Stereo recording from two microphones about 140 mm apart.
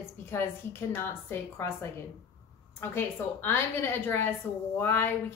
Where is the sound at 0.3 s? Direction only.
15° left (ahead or behind).